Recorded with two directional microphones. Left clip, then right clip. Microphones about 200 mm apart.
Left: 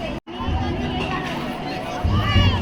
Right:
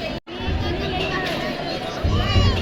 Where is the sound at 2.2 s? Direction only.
55° left (ahead or behind).